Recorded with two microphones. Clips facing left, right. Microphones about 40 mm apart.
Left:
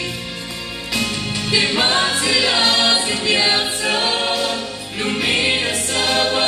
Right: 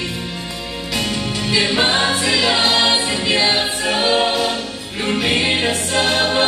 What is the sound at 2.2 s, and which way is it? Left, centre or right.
Choir, centre.